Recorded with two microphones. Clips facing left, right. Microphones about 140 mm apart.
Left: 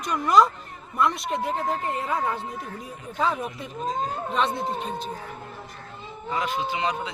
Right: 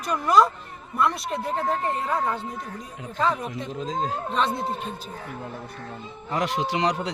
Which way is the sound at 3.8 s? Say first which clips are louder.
Left 1 dB; 90° right.